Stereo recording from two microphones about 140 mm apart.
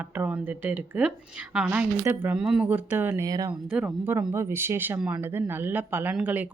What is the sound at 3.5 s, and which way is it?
Speech, 10° right (ahead or behind).